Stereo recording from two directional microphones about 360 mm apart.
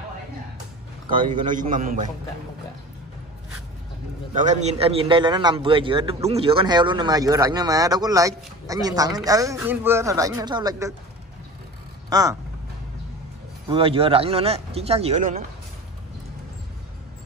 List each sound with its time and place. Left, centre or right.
1.1 s a man's voice: right
4.5 s a man's voice: centre
12.1 s speech: centre
13.7 s a man's voice: centre